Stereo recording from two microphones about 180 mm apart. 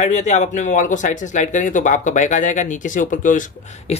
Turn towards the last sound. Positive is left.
turn(degrees=40)  # may be behind; listen again after turning